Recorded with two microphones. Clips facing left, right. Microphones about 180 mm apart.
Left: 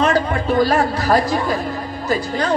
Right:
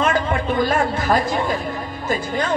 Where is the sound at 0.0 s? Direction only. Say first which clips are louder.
Left 2 dB; 45° left (ahead or behind).